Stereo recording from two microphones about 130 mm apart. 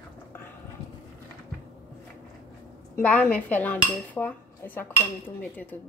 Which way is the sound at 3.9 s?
15° left (ahead or behind).